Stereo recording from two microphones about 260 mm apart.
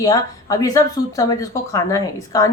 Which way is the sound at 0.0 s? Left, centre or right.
Centre.